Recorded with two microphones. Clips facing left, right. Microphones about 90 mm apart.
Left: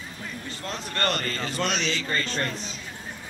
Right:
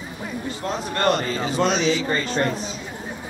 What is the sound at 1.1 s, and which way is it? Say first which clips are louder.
Speech: right 7 dB; 10° right (ahead or behind).